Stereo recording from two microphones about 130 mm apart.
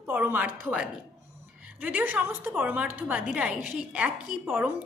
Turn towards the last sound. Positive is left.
turn(degrees=-15)  # may be behind; listen again after turning